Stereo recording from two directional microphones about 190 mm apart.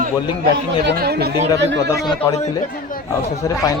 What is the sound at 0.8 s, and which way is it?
Speech, 55° right (ahead or behind).